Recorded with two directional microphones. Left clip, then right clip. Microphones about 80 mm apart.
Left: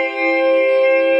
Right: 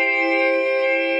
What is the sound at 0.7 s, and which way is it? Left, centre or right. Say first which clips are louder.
Music: left 6 dB; right.